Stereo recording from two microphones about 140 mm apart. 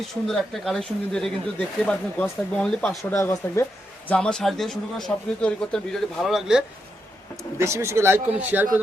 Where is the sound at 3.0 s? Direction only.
20° left (ahead or behind).